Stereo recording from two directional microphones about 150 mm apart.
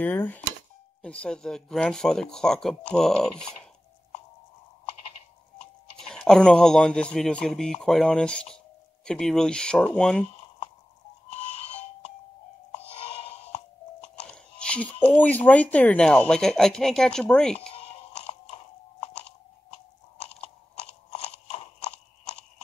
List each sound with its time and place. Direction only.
0.0 s speech: 10° left (ahead or behind)
5.9 s speech: 5° left (ahead or behind)
14.3 s music: 5° left (ahead or behind)
15.0 s speech: 10° left (ahead or behind)
17.6 s a sound: 40° left (ahead or behind)
21.1 s a sound: 45° left (ahead or behind)